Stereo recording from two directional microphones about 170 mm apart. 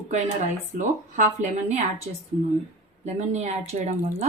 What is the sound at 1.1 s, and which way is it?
Speech, 45° right (ahead or behind).